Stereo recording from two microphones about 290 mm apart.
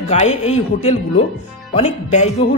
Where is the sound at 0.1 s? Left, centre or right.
Left.